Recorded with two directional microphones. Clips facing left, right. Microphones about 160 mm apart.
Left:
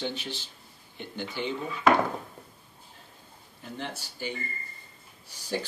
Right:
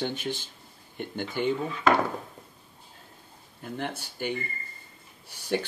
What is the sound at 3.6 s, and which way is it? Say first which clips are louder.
Speech: right 4 dB; 55° right (ahead or behind).